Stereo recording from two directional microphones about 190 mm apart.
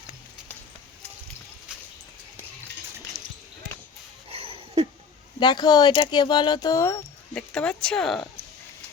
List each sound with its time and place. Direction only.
3.1 s basketball bounce: 20° right (ahead or behind)
4.3 s a sound: 30° right (ahead or behind)
5.4 s speech: 20° left (ahead or behind); by 8.4 s centre (ahead or behind)